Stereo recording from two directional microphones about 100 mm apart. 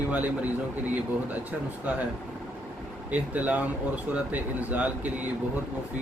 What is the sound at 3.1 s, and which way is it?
Speech, 15° right (ahead or behind).